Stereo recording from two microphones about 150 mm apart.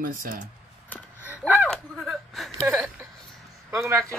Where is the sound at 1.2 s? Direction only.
10° right (ahead or behind).